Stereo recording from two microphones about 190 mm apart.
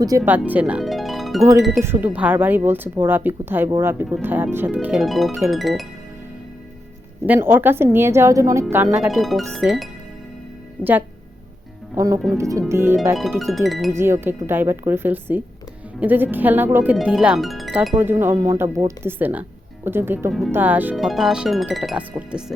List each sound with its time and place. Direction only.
0.3 s speech: 10° right (ahead or behind)
1.8 s speech: 10° right (ahead or behind)
7.3 s speech: 10° right (ahead or behind)
9.0 s speech: centre (ahead or behind)
11.9 s speech: 15° right (ahead or behind)
13.4 s speech: centre (ahead or behind)
13.9 s speech: 15° right (ahead or behind)
17.9 s speech: 10° right (ahead or behind)